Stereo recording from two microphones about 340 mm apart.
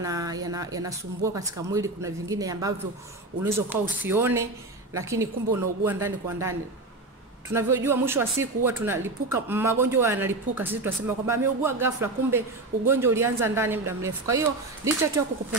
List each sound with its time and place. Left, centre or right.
0.0 s speech: centre